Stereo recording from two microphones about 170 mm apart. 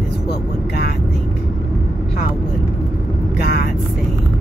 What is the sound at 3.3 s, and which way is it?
Speech, 70° left (ahead or behind).